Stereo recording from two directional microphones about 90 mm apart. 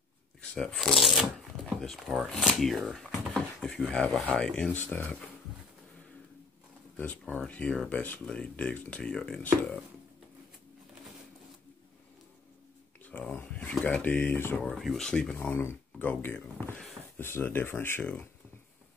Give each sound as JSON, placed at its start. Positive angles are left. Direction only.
{"t": 0.4, "sound": "shuffling cards", "side_deg": 10}
{"t": 0.7, "sound": "speech", "side_deg": 0}
{"t": 7.3, "sound": "speech", "side_deg": 15}
{"t": 13.0, "sound": "a sound", "side_deg": 20}
{"t": 13.8, "sound": "speech", "side_deg": 20}
{"t": 14.6, "sound": "speech", "side_deg": 0}
{"t": 15.3, "sound": "speech", "side_deg": 25}